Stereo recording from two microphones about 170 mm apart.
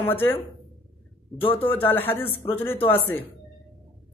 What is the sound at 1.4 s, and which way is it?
Speech, 30° left (ahead or behind).